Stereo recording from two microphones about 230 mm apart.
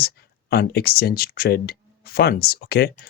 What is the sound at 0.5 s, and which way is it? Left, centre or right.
Speech, left.